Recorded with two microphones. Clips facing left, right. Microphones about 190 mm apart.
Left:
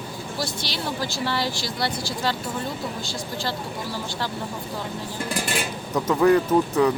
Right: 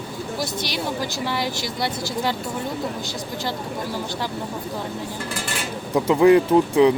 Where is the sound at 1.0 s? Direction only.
15° right (ahead or behind).